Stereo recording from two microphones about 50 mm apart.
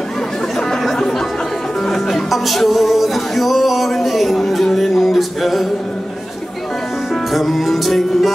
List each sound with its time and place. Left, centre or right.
0.6 s chatter: centre
1.9 s music: centre
7.3 s music: centre